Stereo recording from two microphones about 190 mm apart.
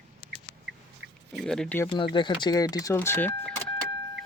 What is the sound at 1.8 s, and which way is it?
Speech, 25° left (ahead or behind).